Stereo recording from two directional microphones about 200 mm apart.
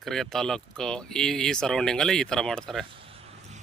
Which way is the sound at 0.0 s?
Centre (ahead or behind).